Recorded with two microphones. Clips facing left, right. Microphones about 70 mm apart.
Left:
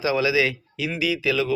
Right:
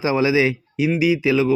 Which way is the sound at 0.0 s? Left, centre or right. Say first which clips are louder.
Right 4 dB; right.